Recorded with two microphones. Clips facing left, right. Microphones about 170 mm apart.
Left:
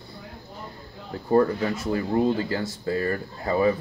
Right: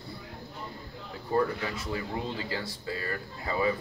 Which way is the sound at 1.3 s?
45° left (ahead or behind).